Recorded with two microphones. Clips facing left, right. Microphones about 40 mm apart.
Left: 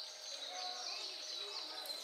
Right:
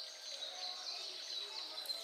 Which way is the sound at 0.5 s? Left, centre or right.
Left.